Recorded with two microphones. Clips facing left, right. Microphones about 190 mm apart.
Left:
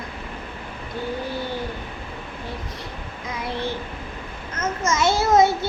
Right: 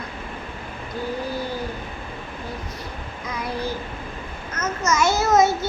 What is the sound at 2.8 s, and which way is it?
Child singing, 20° left (ahead or behind).